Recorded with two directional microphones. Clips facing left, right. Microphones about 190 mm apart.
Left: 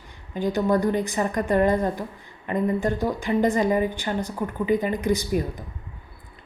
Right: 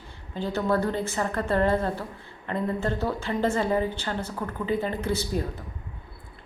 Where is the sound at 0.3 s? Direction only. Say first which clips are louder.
Left 4 dB; 15° left (ahead or behind).